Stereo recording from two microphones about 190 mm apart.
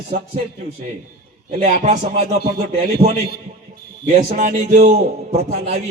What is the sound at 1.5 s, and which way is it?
Speech, 40° right (ahead or behind).